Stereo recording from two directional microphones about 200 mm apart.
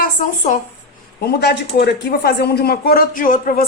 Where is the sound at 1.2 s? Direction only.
55° left (ahead or behind).